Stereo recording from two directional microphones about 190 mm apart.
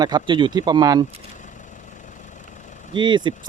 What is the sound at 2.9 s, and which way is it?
Speech, 25° right (ahead or behind).